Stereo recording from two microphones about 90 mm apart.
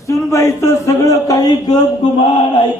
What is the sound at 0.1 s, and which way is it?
Speech, 35° left (ahead or behind).